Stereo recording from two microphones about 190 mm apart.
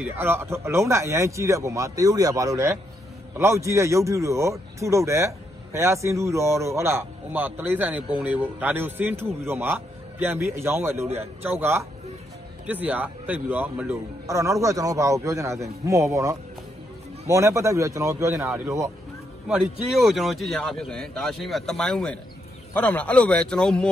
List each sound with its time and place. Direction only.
0.0 s speech: 10° right (ahead or behind)
19.4 s a man's voice: 5° right (ahead or behind)